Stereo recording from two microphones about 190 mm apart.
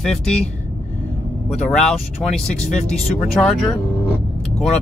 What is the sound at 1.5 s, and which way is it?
Speech, 5° left (ahead or behind).